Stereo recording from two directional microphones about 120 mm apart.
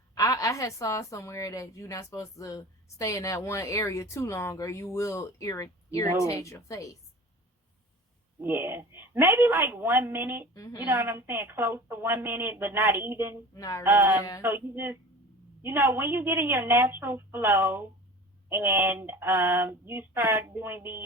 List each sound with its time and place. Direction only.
0.1 s a woman's voice: 30° left (ahead or behind)
8.4 s female singing: 20° right (ahead or behind)
10.5 s a woman's voice: 30° left (ahead or behind)
10.8 s female singing: 20° right (ahead or behind)
13.5 s a woman's voice: 30° left (ahead or behind)
13.8 s a sound: 15° right (ahead or behind)
14.4 s female singing: 20° right (ahead or behind)